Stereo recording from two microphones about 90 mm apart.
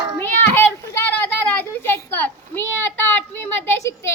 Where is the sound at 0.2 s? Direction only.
25° left (ahead or behind).